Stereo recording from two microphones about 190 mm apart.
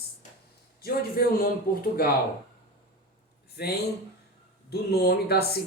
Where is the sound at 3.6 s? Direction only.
60° left (ahead or behind).